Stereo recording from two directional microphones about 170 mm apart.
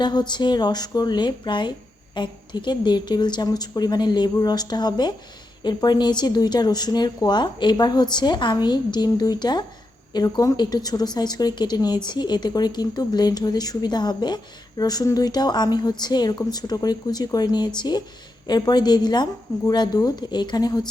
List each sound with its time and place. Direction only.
0.0 s a woman's voice: 25° left (ahead or behind)